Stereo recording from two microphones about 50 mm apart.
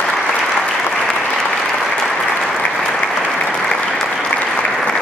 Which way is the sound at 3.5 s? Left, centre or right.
Centre.